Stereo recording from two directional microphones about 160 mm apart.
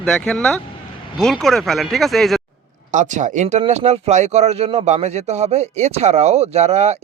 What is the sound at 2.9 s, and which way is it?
Speech, 50° right (ahead or behind).